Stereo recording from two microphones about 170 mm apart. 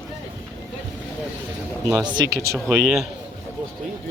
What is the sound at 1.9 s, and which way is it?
Speech, 25° right (ahead or behind).